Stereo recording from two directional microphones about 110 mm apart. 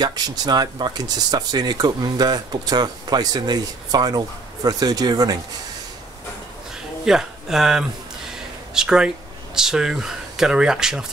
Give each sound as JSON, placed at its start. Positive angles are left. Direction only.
{"t": 0.0, "sound": "speech", "side_deg": -40}
{"t": 7.1, "sound": "speech", "side_deg": -5}